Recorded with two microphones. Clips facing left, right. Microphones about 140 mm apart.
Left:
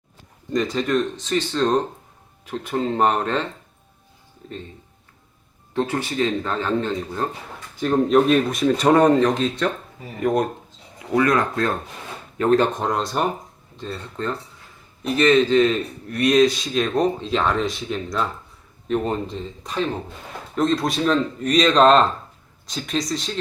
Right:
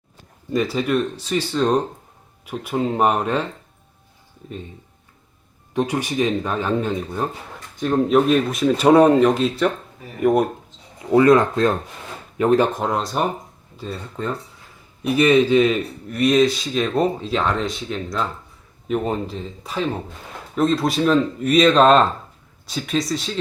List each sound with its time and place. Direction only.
0.5 s speech: 5° right (ahead or behind)
5.7 s speech: 15° right (ahead or behind)
7.8 s speech: centre (ahead or behind)
11.1 s speech: 25° right (ahead or behind)
12.4 s speech: 10° right (ahead or behind)